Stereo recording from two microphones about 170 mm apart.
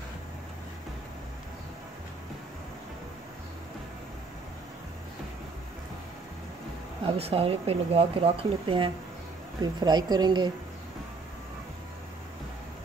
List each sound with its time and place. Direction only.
7.1 s a woman's voice: 35° right (ahead or behind)